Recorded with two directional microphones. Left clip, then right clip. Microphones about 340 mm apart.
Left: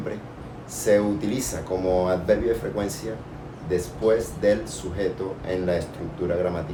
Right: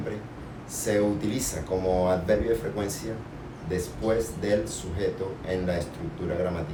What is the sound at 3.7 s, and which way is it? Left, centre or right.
Speech, centre.